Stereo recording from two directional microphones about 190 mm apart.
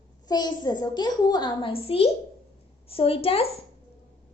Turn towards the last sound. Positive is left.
turn(degrees=30)  # may be behind; listen again after turning